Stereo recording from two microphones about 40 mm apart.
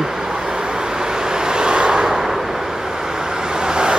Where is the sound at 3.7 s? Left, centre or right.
Right.